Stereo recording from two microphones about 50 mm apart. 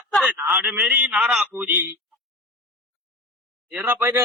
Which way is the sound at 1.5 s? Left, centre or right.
Right.